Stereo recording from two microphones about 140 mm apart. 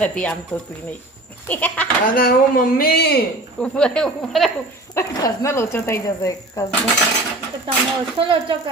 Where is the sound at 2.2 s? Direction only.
90° left.